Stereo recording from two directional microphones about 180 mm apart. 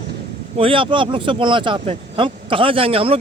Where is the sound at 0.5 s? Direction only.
30° right (ahead or behind).